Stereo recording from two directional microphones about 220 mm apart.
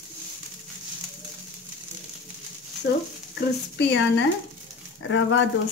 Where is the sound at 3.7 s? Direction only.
55° left (ahead or behind).